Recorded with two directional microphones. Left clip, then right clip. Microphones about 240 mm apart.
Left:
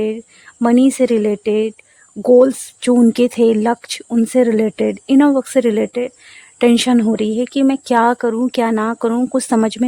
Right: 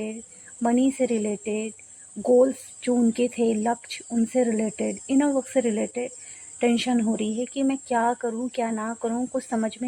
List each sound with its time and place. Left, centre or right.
0.6 s speech: left